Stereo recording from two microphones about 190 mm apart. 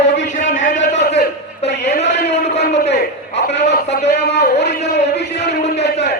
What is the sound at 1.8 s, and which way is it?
Speech, 35° left (ahead or behind).